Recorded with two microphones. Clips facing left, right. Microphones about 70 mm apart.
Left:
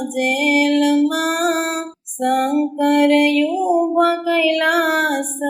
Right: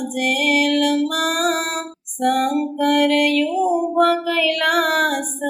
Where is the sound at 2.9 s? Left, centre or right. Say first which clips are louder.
Left 3 dB; left.